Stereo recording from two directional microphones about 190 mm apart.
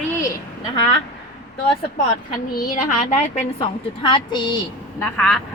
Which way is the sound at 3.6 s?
25° left (ahead or behind).